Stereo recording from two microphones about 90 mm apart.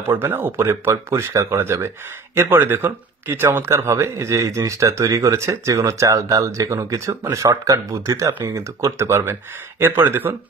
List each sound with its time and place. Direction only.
0.0 s speech: 25° right (ahead or behind)